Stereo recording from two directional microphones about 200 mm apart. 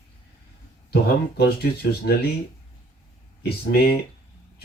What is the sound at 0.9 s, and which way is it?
Speech, 50° left (ahead or behind).